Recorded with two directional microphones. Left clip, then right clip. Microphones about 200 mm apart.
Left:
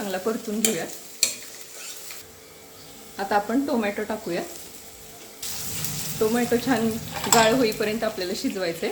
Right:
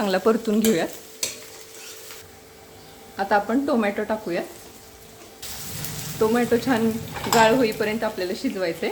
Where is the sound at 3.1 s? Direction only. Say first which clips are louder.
Right 2 dB; 15° right (ahead or behind).